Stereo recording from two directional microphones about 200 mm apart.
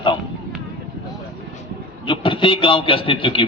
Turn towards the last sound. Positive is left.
turn(degrees=25)  # may be behind; listen again after turning